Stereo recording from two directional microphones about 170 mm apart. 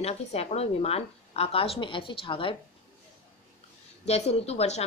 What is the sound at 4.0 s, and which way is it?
Speech, 40° left (ahead or behind).